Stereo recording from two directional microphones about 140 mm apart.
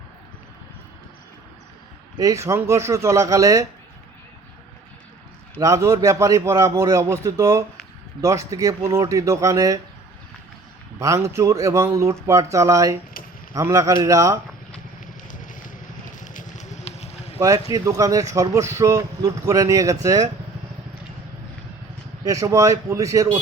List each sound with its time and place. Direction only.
2.1 s a man's voice: 25° right (ahead or behind)
5.5 s a man's voice: 25° right (ahead or behind)
11.0 s a man's voice: 25° right (ahead or behind)
15.0 s vehicle: 70° left (ahead or behind); by 17.3 s 50° left (ahead or behind)
17.4 s a man's voice: 25° right (ahead or behind)
22.2 s a man's voice: 25° right (ahead or behind)